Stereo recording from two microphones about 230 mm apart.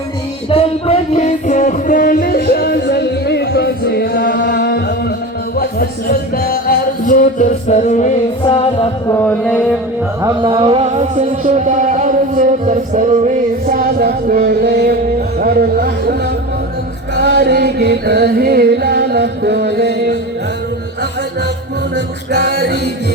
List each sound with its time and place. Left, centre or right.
0.5 s music: left
9.1 s music: centre
10.2 s music: centre; by 14.9 s right
15.4 s a sound: right
17.2 s music: right